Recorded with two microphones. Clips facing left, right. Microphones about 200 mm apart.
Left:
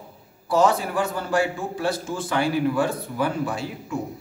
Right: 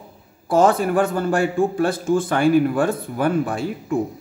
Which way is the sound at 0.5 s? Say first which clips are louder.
Right 4 dB; 50° right (ahead or behind).